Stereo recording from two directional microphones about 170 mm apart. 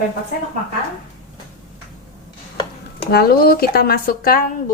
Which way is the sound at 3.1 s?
65° left (ahead or behind).